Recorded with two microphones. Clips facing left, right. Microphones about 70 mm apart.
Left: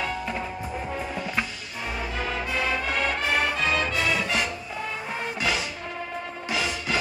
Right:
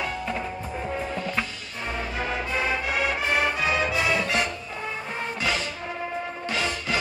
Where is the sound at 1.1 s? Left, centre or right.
Centre.